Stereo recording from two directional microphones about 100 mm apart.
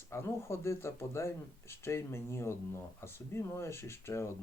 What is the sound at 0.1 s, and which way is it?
Speech, 25° left (ahead or behind).